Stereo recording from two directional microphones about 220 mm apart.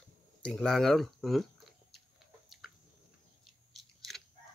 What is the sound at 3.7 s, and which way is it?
Biting, centre (ahead or behind).